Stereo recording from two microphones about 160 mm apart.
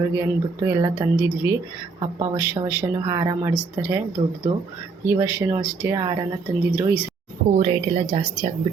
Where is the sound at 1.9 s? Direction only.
25° right (ahead or behind).